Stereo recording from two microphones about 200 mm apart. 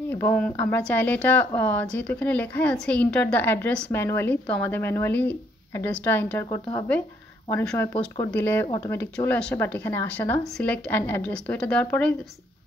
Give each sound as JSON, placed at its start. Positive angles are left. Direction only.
{"t": 0.1, "sound": "speech", "side_deg": 10}
{"t": 8.6, "sound": "speech", "side_deg": 25}
{"t": 8.9, "sound": "speech", "side_deg": 10}